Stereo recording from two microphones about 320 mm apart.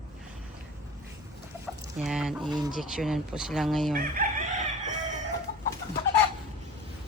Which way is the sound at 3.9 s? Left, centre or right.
Right.